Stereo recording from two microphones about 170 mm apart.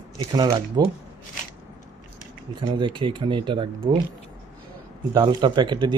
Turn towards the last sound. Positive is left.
turn(degrees=-25)  # may be behind; listen again after turning